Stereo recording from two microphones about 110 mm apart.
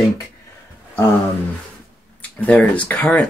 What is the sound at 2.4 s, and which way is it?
Speech, 15° left (ahead or behind).